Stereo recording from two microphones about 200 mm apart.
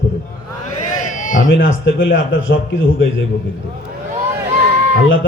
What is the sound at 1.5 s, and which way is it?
A man's voice, 70° left (ahead or behind).